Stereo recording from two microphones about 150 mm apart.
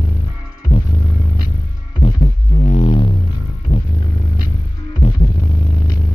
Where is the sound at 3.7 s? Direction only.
80° left.